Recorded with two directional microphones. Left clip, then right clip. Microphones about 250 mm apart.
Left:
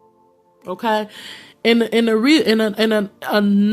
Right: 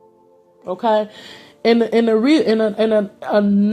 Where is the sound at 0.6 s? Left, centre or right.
Left.